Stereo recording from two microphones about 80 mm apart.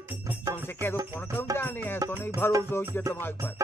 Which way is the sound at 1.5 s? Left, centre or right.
Left.